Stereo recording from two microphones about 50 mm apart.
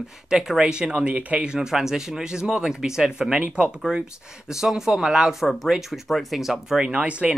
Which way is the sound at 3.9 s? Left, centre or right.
Centre.